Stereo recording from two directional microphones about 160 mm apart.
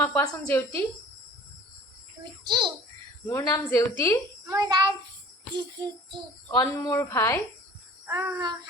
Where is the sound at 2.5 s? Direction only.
30° right (ahead or behind).